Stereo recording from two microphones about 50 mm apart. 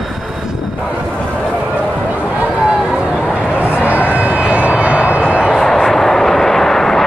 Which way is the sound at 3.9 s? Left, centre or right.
Right.